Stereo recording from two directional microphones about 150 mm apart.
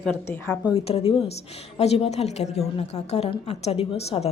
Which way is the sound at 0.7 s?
40° left (ahead or behind).